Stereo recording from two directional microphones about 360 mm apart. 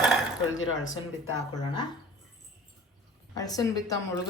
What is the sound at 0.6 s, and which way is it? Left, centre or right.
Speech, left.